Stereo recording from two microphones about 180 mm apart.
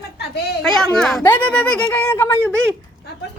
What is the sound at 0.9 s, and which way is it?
Speech, 5° left (ahead or behind).